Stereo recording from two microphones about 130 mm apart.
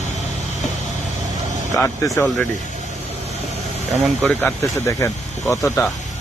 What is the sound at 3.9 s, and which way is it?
Speech, centre (ahead or behind).